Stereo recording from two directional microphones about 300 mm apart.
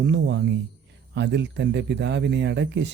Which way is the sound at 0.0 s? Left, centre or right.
Right.